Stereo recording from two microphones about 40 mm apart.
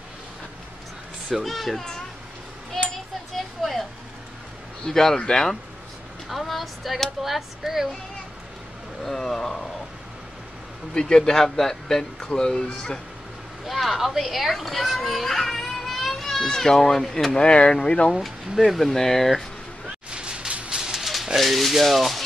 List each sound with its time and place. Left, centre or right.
1.3 s rub: centre
3.3 s a sound: centre
4.8 s speech: centre
6.2 s speech: centre
9.0 s speech: centre
11.0 s speech: centre
13.7 s a child's voice: centre
17.3 s speech: left
18.6 s rub: centre
18.9 s speech: centre
20.1 s a sound: right
20.7 s a sound: centre
21.0 s a sound: centre
21.4 s rub: centre